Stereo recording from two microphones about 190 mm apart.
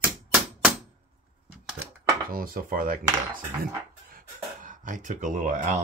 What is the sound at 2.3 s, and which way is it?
Speech, 50° right (ahead or behind).